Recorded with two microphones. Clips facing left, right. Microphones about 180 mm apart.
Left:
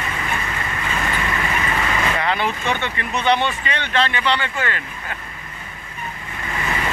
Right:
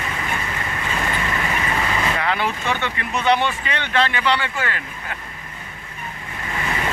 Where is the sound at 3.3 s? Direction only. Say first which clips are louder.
Even; 10° right (ahead or behind).